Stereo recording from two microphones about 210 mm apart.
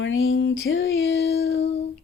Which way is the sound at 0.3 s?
50° left (ahead or behind).